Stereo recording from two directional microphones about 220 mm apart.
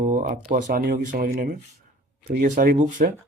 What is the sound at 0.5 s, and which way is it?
Speech, 40° right (ahead or behind).